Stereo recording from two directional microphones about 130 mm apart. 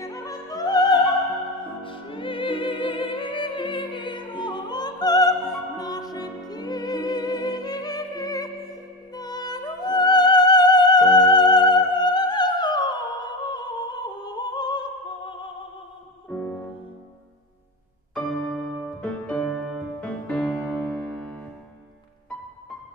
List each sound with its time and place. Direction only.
0.0 s music: 25° left (ahead or behind)
1.8 s music: 40° left (ahead or behind)
16.3 s music: 10° left (ahead or behind)
18.1 s music: 5° left (ahead or behind)